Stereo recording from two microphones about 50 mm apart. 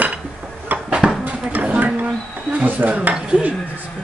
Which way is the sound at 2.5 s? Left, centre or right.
Right.